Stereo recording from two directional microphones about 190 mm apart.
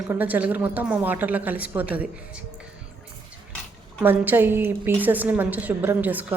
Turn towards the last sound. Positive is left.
turn(degrees=-10)  # may be behind; listen again after turning